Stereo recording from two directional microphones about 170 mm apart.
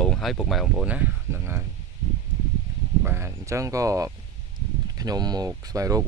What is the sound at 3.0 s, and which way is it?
Speech, 15° right (ahead or behind).